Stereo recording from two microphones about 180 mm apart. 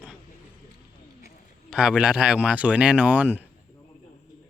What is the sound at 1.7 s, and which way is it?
Speech, 5° right (ahead or behind).